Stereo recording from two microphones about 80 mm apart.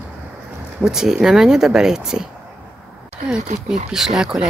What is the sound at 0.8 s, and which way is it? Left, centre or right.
Speech, centre.